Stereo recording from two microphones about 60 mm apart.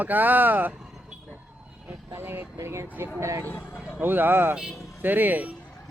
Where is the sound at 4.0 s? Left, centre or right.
Right.